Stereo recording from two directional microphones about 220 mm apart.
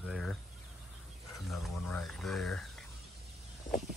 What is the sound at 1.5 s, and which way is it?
Speech, centre (ahead or behind).